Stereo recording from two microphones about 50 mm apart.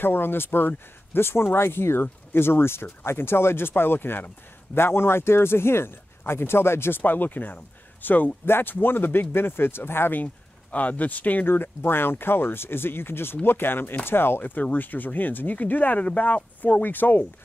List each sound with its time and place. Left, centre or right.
0.0 s speech: left
7.0 s speech: left
10.1 s speech: left
11.4 s speech: left